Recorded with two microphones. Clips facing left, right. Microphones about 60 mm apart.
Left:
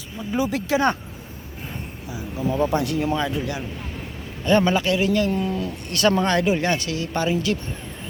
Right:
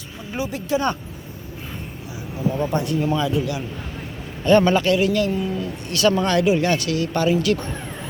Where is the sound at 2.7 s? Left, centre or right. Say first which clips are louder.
Even; left.